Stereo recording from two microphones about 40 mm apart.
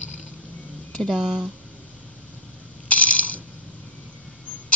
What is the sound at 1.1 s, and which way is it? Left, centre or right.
Speech, right.